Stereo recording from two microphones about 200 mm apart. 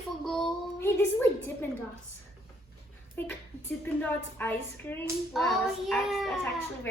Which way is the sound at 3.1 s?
10° left (ahead or behind).